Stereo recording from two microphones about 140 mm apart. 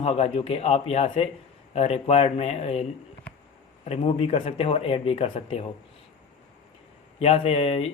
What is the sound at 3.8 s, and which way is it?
Speech, 45° left (ahead or behind).